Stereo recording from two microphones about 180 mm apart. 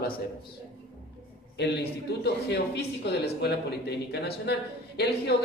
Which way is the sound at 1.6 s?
65° left (ahead or behind).